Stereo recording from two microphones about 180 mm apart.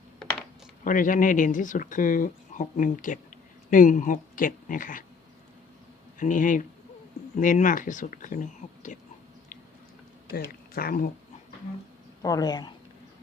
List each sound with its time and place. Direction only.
0.9 s speech: 45° left (ahead or behind)
6.1 s speech: 45° left (ahead or behind)
10.3 s speech: 60° left (ahead or behind)
12.2 s speech: 20° left (ahead or behind)